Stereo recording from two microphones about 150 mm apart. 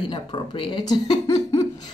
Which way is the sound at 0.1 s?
35° left (ahead or behind).